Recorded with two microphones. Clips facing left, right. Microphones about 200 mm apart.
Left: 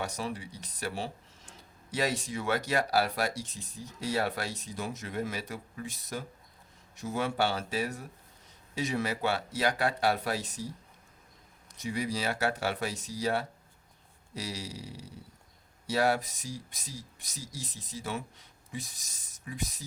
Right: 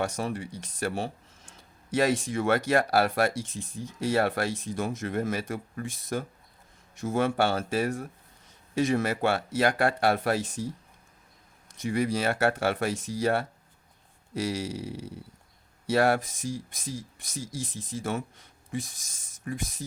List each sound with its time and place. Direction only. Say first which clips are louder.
0.0 s speech: right 5 dB; 50° right (ahead or behind)
11.8 s speech: right 6 dB; 55° right (ahead or behind)